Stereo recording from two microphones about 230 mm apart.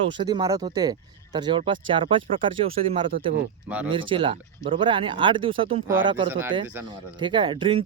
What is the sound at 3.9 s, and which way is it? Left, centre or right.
Speech, right.